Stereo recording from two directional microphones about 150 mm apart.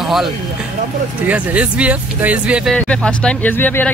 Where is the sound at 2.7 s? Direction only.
5° left (ahead or behind).